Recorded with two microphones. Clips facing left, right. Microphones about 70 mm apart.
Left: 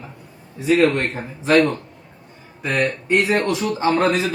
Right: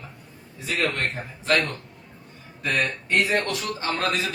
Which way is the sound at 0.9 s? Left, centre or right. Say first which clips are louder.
Left 5 dB; left.